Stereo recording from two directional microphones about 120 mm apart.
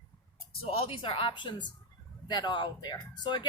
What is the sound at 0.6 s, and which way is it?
Speech, 50° left (ahead or behind).